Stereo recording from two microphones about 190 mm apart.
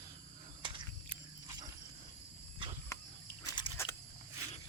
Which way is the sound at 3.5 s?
20° left (ahead or behind).